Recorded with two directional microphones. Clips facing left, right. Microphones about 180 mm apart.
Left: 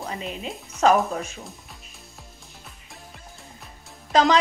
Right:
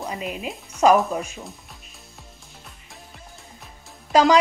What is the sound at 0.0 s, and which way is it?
Speech, 10° right (ahead or behind).